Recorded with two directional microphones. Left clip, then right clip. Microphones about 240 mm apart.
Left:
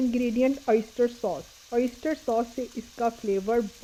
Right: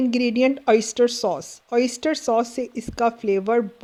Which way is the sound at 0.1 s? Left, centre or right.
Right.